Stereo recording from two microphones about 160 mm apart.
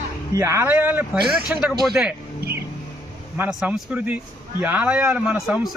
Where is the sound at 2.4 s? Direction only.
75° right (ahead or behind).